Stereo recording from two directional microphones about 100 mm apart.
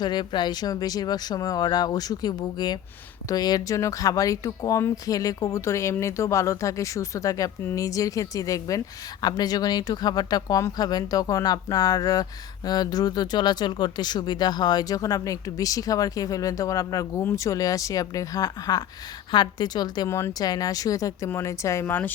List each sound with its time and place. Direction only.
0.0 s speech: 50° left (ahead or behind)
20.1 s speech: 25° left (ahead or behind)
20.4 s speech: 40° left (ahead or behind); by 22.1 s 20° left (ahead or behind)